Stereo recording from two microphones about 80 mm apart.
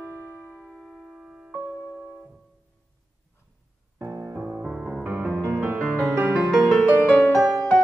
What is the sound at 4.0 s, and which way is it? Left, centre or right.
Music, right.